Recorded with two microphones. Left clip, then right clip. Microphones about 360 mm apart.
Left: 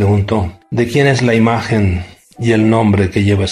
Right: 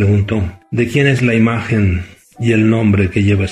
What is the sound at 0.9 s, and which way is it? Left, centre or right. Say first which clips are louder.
Speech: left 2 dB; left.